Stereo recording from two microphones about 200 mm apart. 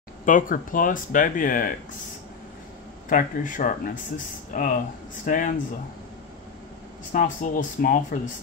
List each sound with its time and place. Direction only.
0.2 s speech: 40° left (ahead or behind)
3.1 s speech: 40° left (ahead or behind)
7.1 s speech: 40° left (ahead or behind)